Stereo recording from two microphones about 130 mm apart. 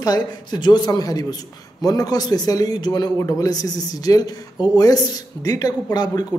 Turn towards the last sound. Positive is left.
turn(degrees=30)  # may be behind; listen again after turning